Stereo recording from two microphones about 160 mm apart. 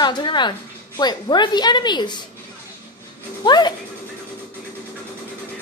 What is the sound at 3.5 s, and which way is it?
Speech, 25° left (ahead or behind).